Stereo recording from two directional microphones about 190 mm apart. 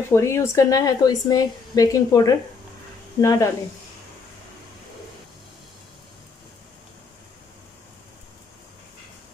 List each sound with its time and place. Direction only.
0.1 s speech: 15° left (ahead or behind)